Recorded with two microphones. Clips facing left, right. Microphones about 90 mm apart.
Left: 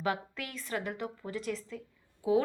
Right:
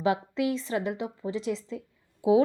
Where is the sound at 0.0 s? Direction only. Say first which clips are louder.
Right 8 dB; 25° right (ahead or behind).